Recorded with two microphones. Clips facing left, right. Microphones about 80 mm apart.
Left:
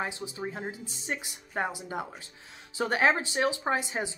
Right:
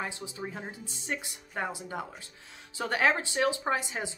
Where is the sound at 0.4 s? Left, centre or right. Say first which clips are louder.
Left 3 dB; left.